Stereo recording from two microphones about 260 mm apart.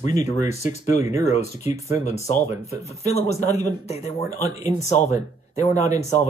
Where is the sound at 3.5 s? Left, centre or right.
Centre.